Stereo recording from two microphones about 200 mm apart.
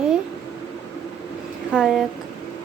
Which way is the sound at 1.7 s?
Centre (ahead or behind).